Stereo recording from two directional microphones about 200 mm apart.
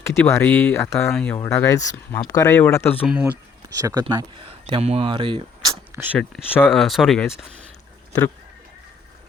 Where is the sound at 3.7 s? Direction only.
20° right (ahead or behind).